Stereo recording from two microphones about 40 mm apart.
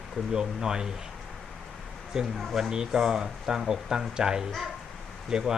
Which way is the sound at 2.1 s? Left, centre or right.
Centre.